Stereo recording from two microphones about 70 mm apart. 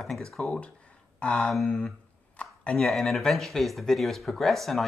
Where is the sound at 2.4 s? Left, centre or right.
Centre.